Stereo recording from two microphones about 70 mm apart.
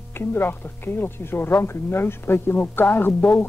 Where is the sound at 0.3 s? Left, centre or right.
Left.